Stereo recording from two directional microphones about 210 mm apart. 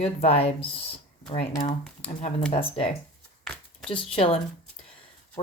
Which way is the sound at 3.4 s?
5° left (ahead or behind).